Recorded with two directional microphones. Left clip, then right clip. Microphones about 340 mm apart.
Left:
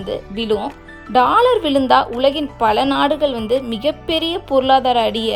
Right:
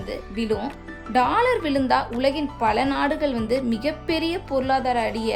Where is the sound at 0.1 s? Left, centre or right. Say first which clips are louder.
Left 7 dB; centre.